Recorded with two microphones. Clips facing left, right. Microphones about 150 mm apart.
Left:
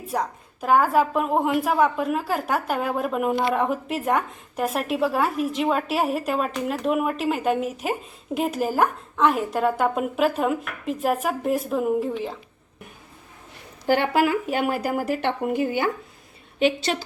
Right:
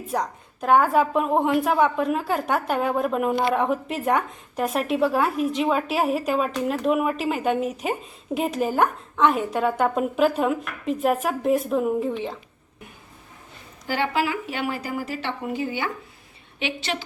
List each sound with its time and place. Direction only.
0.1 s a woman's voice: centre (ahead or behind)
13.8 s speech: 55° left (ahead or behind)
16.6 s speech: 40° left (ahead or behind)